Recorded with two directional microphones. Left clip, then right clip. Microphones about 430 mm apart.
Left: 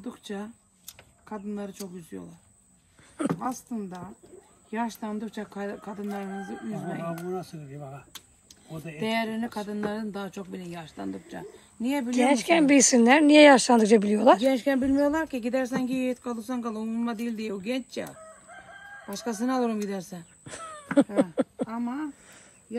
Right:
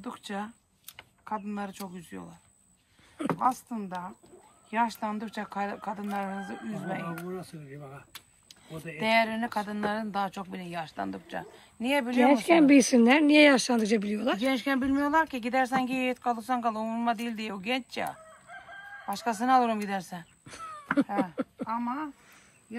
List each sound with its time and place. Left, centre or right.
0.0 s speech: centre
3.3 s speech: centre
6.7 s speech: centre
7.3 s speech: centre
8.9 s speech: centre
14.6 s speech: right
15.5 s speech: centre
19.0 s speech: centre